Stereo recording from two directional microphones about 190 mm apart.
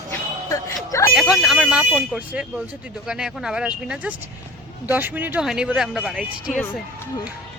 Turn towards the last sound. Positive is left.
turn(degrees=-5)  # may be behind; listen again after turning